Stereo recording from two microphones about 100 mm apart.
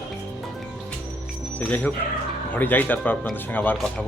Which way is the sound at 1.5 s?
15° left (ahead or behind).